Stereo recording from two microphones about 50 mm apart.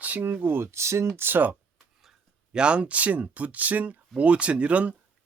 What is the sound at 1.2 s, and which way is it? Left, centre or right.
Speech, right.